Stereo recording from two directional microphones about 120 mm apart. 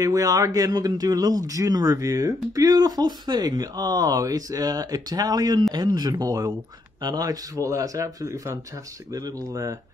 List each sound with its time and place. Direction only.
0.0 s a man's voice: 30° right (ahead or behind)